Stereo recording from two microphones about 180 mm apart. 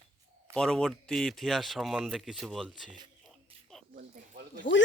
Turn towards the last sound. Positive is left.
turn(degrees=-65)  # may be behind; listen again after turning